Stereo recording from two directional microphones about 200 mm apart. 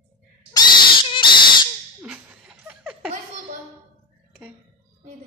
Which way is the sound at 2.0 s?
5° right (ahead or behind).